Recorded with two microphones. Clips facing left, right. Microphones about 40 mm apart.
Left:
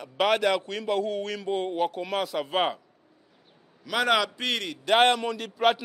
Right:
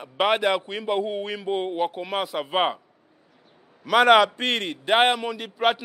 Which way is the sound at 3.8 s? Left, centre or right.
Right.